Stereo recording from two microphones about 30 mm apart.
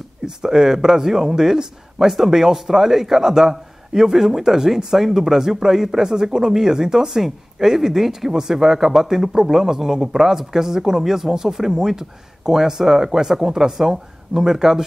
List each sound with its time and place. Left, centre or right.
0.4 s speech: centre